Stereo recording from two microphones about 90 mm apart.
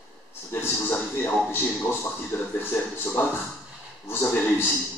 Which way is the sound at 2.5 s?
25° left (ahead or behind).